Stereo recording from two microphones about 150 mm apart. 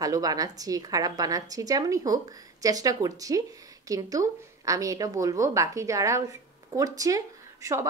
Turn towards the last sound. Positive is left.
turn(degrees=-20)  # may be behind; listen again after turning